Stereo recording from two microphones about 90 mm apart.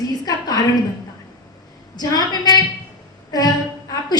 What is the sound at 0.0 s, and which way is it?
Speech, 45° left (ahead or behind).